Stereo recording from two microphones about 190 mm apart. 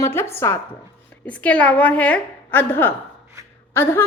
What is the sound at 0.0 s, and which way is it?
A woman's voice, 10° left (ahead or behind).